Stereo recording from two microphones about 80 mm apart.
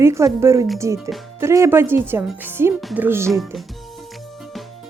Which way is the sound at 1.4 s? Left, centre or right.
Right.